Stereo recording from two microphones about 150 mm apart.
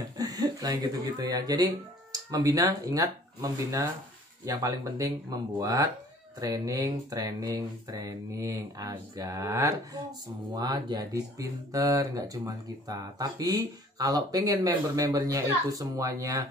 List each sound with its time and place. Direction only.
0.2 s speech: 25° right (ahead or behind)